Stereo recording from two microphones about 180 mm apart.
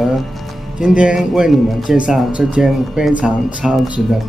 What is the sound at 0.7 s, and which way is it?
Speech, 5° right (ahead or behind).